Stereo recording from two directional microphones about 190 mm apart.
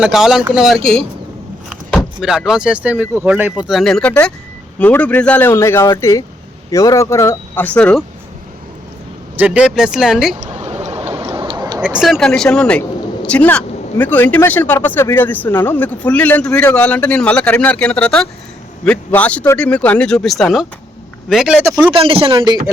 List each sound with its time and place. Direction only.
0.0 s speech: 5° right (ahead or behind)
9.3 s speech: 5° right (ahead or behind)
10.5 s a sound: 35° right (ahead or behind)
11.8 s a man's voice: 5° right (ahead or behind)
21.9 s a man's voice: 30° right (ahead or behind)